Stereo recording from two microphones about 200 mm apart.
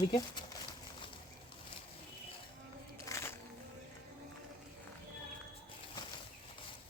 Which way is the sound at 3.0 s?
15° left (ahead or behind).